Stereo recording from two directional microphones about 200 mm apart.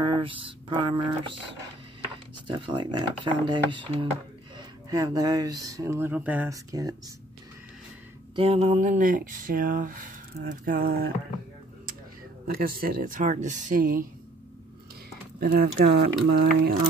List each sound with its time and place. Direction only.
0.0 s speech: 25° right (ahead or behind)
2.4 s speech: 25° right (ahead or behind)
8.4 s speech: 30° right (ahead or behind); by 11.1 s 45° right (ahead or behind)
12.4 s speech: 45° right (ahead or behind)
15.4 s speech: 50° right (ahead or behind)